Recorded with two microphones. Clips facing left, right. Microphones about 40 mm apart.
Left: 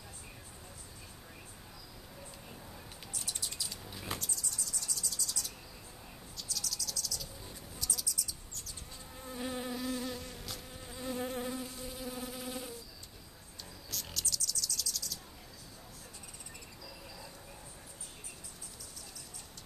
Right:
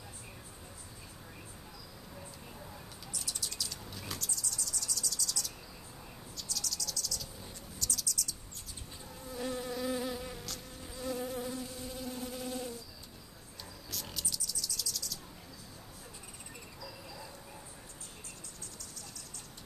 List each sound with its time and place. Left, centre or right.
3.3 s bird: left
3.5 s a sound: centre
4.1 s vehicle: left
6.3 s cricket: centre
7.8 s a sound: centre
9.4 s insect: centre
9.8 s insect: centre
10.4 s insect: centre
11.1 s insect: left
11.7 s insect: centre
13.8 s a sound: centre
14.2 s cricket: centre